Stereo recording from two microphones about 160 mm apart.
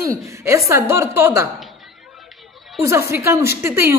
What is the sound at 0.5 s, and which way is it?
A woman's voice, 20° right (ahead or behind).